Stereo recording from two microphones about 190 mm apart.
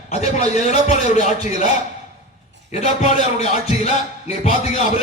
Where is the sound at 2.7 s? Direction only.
35° left (ahead or behind).